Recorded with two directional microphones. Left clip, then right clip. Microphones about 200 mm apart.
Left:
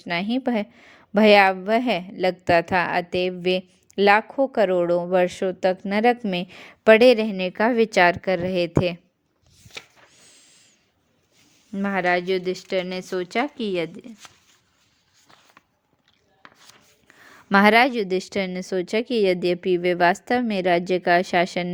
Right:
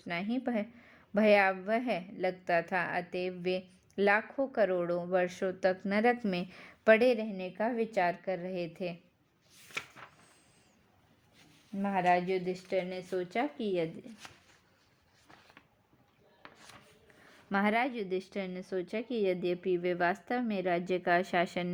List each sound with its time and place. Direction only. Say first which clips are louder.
0.0 s a woman's voice: left 11 dB; 30° left (ahead or behind)
11.8 s speech: left 6 dB; 45° left (ahead or behind)
16.4 s a sound: left 5 dB; 35° left (ahead or behind)
17.5 s a woman's voice: left 15 dB; 40° left (ahead or behind)